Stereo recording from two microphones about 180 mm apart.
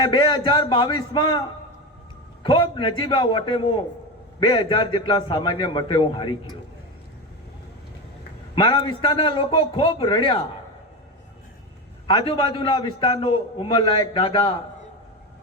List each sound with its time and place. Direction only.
0.0 s a man's voice: 25° left (ahead or behind)
2.4 s a man's voice: 25° left (ahead or behind)
8.5 s a man's voice: 25° left (ahead or behind)
12.0 s a man's voice: 30° left (ahead or behind)